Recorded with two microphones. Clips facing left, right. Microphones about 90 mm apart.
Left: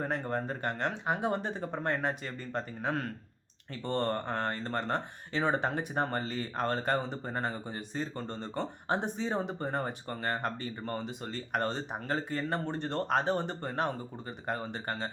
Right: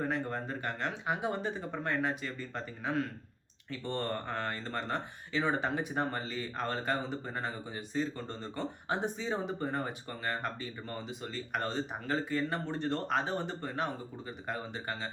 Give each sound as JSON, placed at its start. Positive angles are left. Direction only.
{"t": 0.0, "sound": "speech", "side_deg": 45}